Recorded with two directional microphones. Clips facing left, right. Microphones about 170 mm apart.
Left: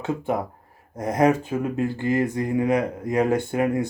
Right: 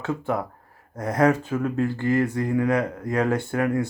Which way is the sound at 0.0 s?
20° left (ahead or behind).